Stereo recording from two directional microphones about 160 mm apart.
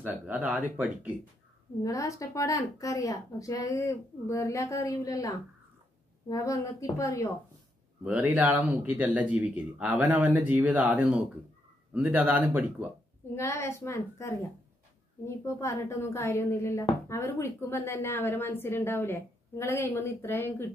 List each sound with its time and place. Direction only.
0.0 s speech: 10° right (ahead or behind)
1.8 s a woman's voice: 20° left (ahead or behind)
8.0 s speech: 10° right (ahead or behind)
13.3 s a woman's voice: 15° left (ahead or behind)